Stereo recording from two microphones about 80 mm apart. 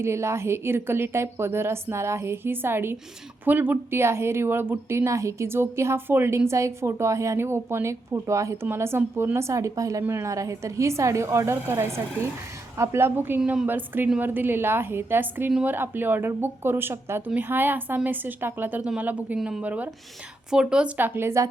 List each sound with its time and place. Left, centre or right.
0.0 s speech: right
10.0 s speech: right